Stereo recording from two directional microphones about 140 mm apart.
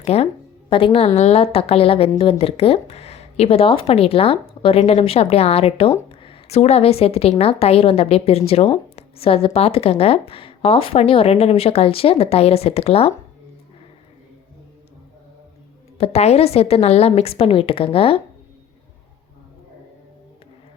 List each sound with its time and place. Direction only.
0.0 s a woman's voice: 45° left (ahead or behind)
16.0 s a woman's voice: 50° left (ahead or behind)